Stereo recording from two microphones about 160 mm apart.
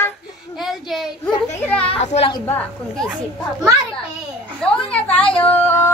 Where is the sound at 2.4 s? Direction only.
5° left (ahead or behind).